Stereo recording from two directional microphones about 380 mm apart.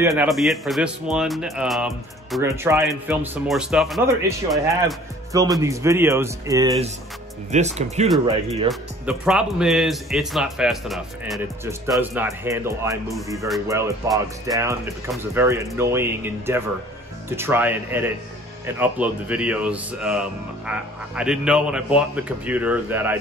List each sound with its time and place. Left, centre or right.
0.0 s speech: centre
8.6 s speech: centre